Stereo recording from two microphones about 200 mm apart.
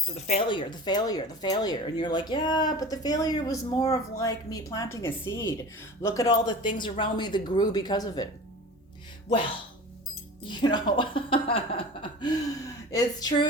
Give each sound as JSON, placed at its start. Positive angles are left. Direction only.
{"t": 0.3, "sound": "a woman's voice", "side_deg": 25}
{"t": 10.5, "sound": "speech", "side_deg": 20}